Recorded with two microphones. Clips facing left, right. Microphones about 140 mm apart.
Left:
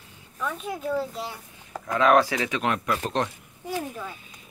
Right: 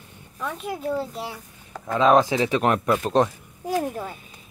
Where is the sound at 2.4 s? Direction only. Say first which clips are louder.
Right 5 dB; 40° right (ahead or behind).